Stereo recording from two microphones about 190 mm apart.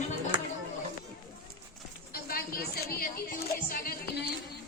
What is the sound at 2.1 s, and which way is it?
Music, 50° left (ahead or behind).